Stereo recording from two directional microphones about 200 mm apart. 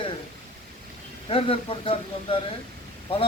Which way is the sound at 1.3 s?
30° left (ahead or behind).